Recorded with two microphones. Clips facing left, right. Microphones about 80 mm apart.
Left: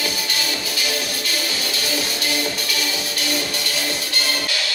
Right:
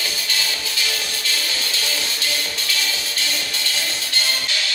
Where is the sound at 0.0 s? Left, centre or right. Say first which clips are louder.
Left 2 dB; left.